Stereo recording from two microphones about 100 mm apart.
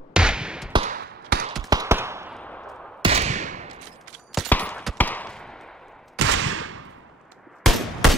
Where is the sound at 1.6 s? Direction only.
40° right (ahead or behind).